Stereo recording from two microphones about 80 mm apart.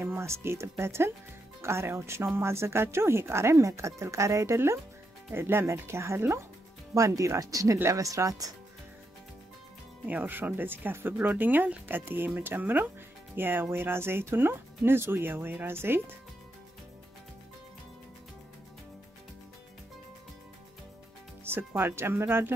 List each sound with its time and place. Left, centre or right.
0.0 s speech: right
10.0 s speech: right
21.5 s speech: right